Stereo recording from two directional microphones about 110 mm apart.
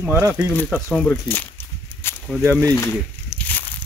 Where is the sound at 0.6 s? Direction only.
5° left (ahead or behind).